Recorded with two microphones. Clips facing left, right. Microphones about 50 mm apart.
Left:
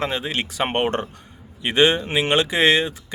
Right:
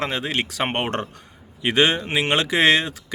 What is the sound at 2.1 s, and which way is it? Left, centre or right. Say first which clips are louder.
Speech: left 1 dB; right.